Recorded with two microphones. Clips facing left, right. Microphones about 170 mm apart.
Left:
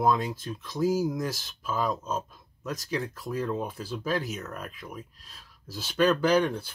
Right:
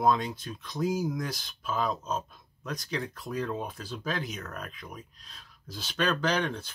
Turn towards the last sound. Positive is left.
turn(degrees=10)  # may be behind; listen again after turning